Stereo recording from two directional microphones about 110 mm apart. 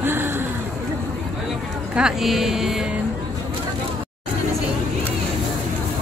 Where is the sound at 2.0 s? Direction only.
5° right (ahead or behind).